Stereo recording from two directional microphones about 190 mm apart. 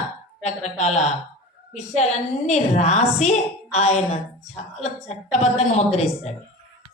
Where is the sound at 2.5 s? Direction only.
35° left (ahead or behind).